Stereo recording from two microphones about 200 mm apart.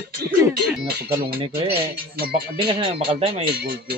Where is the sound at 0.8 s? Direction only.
50° right (ahead or behind).